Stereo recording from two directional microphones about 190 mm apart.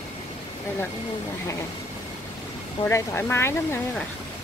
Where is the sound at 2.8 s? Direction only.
15° left (ahead or behind).